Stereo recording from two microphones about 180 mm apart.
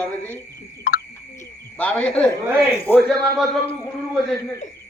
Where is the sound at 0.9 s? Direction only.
60° left (ahead or behind).